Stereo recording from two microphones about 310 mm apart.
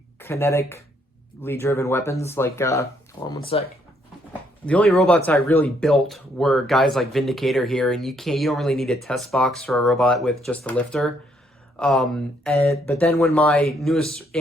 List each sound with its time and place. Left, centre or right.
0.2 s speech: centre
4.3 s speech: centre